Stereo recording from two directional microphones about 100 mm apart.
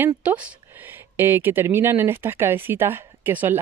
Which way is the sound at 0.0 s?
15° right (ahead or behind).